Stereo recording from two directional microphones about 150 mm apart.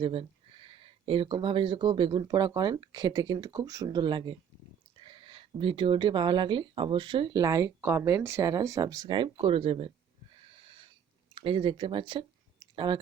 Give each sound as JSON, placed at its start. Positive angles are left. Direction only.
{"t": 0.0, "sound": "speech", "side_deg": -40}
{"t": 10.4, "sound": "wheeze", "side_deg": -40}
{"t": 11.3, "sound": "speech", "side_deg": -35}